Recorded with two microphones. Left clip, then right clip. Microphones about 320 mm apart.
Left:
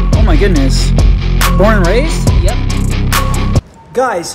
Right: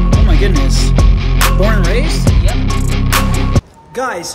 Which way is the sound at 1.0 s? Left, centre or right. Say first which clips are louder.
Right 1 dB; centre.